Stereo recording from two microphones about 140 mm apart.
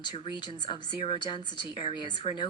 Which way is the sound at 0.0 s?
35° left (ahead or behind).